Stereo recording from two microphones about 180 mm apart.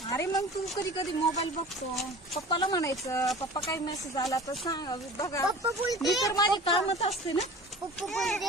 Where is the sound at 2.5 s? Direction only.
25° left (ahead or behind).